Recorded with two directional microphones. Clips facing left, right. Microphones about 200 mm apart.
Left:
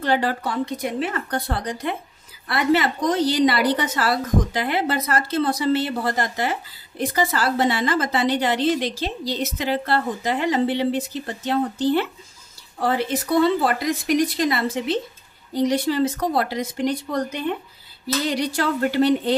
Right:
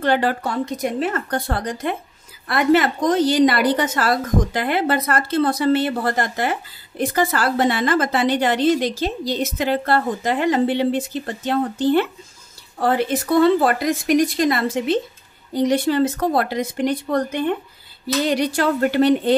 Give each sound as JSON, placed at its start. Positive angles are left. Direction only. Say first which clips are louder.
{"t": 0.0, "sound": "a woman's voice", "louder": "right 3 dB", "side_deg": -55}